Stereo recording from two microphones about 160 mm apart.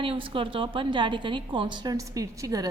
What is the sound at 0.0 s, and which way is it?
A woman's voice, 35° right (ahead or behind).